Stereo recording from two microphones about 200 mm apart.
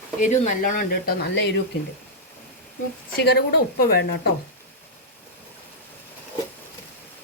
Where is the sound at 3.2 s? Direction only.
55° left (ahead or behind).